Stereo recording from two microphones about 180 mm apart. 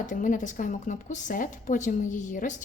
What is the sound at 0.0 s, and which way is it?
A woman's voice, 45° left (ahead or behind).